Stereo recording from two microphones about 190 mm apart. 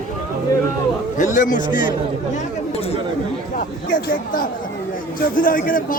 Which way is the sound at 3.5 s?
45° left (ahead or behind).